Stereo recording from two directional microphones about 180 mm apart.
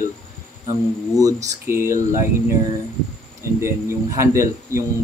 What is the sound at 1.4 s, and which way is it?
Speech, 15° right (ahead or behind).